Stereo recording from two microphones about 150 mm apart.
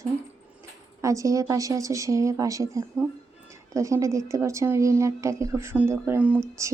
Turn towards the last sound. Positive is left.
turn(degrees=-20)  # may be behind; listen again after turning